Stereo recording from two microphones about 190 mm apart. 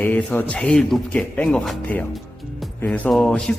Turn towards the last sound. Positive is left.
turn(degrees=5)  # may be behind; listen again after turning